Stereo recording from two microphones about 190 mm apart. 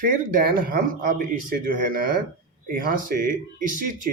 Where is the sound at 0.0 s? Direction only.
50° right (ahead or behind).